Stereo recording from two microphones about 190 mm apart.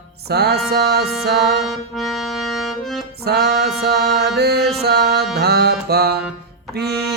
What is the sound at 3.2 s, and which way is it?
Music, 55° right (ahead or behind).